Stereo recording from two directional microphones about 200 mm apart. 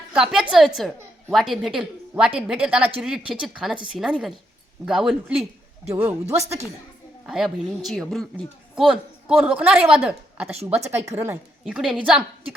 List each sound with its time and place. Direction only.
0.1 s a woman's voice: 5° right (ahead or behind)
7.3 s a woman's voice: centre (ahead or behind)
11.6 s a woman's voice: centre (ahead or behind)